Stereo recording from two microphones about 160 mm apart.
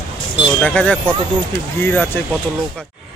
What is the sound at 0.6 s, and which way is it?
Speech, 10° left (ahead or behind).